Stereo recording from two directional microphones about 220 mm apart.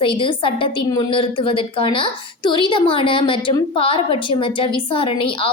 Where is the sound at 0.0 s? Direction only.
25° left (ahead or behind).